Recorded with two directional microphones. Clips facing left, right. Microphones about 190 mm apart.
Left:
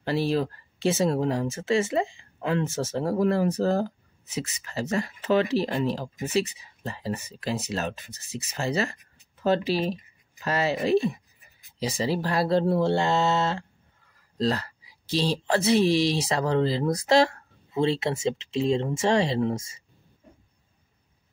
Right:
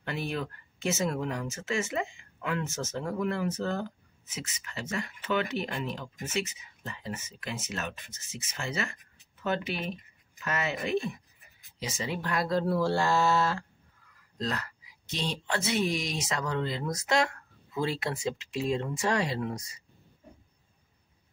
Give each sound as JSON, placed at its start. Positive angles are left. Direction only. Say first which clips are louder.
{"t": 0.0, "sound": "speech", "louder": "left 9 dB", "side_deg": 35}